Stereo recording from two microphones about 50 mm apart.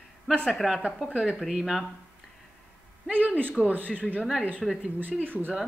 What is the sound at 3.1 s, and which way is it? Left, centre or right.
A man's voice, right.